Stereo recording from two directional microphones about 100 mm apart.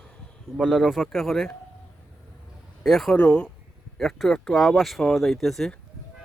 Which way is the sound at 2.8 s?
Centre (ahead or behind).